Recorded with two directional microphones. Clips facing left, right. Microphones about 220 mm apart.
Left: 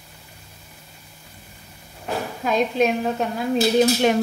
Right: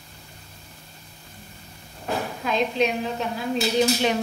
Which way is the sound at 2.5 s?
50° left (ahead or behind).